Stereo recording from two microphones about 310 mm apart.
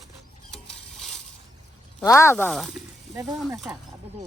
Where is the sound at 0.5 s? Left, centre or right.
Centre.